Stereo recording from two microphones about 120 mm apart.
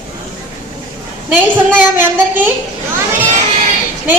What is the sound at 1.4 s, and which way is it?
A woman's voice, 15° right (ahead or behind).